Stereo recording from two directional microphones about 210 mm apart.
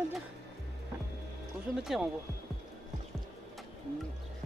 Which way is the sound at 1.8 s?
Centre (ahead or behind).